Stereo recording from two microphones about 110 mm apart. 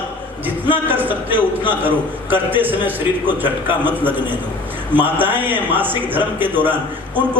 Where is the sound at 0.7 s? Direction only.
15° right (ahead or behind).